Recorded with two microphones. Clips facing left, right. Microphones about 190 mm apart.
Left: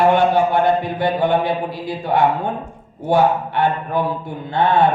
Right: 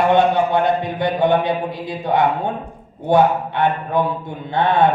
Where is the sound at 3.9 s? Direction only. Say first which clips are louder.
Right 1 dB; 20° right (ahead or behind).